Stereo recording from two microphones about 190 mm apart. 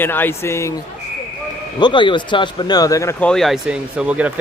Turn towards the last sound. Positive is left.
turn(degrees=-5)  # may be behind; listen again after turning